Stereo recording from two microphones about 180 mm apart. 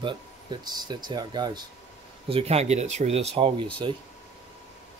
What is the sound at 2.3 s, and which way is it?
Speech, 35° right (ahead or behind).